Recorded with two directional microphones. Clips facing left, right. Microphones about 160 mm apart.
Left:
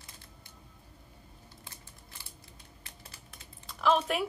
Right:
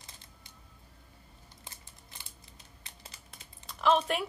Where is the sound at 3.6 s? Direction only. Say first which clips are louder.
Even; centre (ahead or behind).